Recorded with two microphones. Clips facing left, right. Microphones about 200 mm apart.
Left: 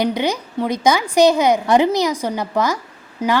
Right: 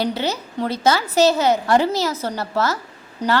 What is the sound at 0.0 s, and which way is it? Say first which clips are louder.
A woman's voice: left 3 dB; 15° left (ahead or behind).